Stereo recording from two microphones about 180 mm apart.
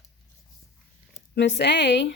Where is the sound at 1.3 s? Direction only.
75° left (ahead or behind).